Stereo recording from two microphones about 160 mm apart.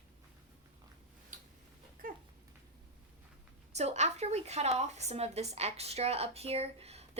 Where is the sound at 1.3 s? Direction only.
55° right (ahead or behind).